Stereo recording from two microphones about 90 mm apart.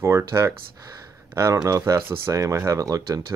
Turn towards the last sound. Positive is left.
turn(degrees=-35)  # may be behind; listen again after turning